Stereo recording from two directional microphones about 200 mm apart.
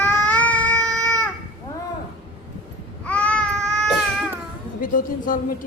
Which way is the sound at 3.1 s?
5° left (ahead or behind).